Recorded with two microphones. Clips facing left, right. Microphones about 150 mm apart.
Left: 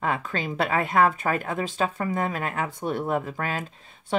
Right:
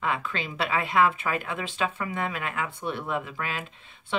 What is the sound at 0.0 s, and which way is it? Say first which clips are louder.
A woman's voice: left 2 dB; 40° left (ahead or behind).